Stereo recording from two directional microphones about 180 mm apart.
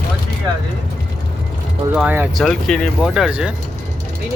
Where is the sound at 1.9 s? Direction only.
10° right (ahead or behind).